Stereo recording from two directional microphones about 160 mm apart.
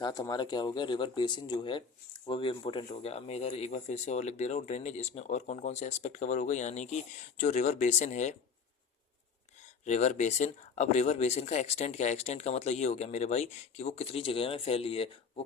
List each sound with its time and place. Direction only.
0.0 s speech: 25° left (ahead or behind); by 8.4 s 50° left (ahead or behind)
9.6 s speech: 45° left (ahead or behind)